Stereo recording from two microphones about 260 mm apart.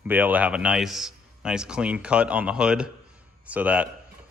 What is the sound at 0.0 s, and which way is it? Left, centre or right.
Speech, centre.